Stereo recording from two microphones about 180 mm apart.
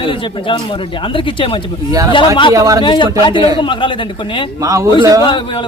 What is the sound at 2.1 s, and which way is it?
Speech, 25° left (ahead or behind).